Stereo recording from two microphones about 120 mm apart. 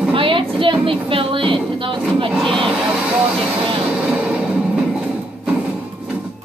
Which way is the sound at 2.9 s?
10° right (ahead or behind).